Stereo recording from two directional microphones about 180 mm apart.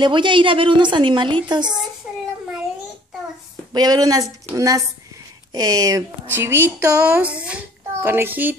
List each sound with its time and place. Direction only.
0.0 s a woman's voice: 25° right (ahead or behind)
3.7 s a woman's voice: 20° right (ahead or behind)